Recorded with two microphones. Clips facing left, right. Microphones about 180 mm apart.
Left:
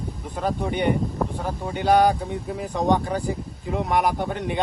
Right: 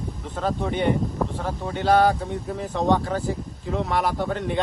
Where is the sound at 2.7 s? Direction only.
15° left (ahead or behind).